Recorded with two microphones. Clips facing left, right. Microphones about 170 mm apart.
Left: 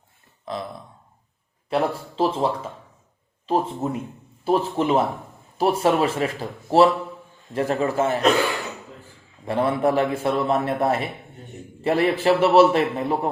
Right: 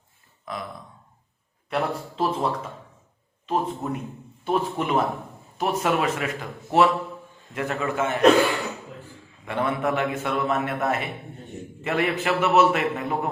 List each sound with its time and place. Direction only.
0.4 s speech: 30° left (ahead or behind)
1.7 s a man's voice: 30° left (ahead or behind)
9.4 s a man's voice: 35° left (ahead or behind)